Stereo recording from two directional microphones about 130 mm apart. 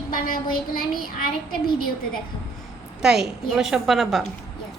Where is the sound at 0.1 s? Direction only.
90° left.